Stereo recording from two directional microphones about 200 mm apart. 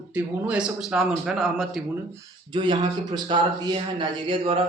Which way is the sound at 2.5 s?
20° right (ahead or behind).